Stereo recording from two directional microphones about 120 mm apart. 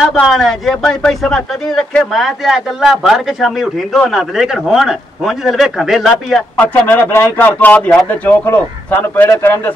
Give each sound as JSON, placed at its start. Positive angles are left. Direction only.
{"t": 0.0, "sound": "speech", "side_deg": 0}
{"t": 6.6, "sound": "speech", "side_deg": 15}